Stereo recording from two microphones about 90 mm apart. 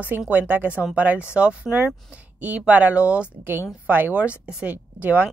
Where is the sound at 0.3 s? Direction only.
20° right (ahead or behind).